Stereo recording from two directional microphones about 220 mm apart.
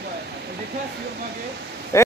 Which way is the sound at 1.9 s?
15° left (ahead or behind).